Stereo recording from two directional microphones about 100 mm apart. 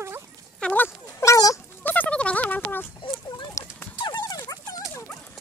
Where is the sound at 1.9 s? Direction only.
15° left (ahead or behind).